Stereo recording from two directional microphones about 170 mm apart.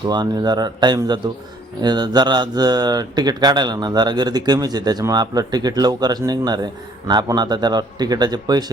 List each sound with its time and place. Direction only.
0.1 s speech: 25° right (ahead or behind)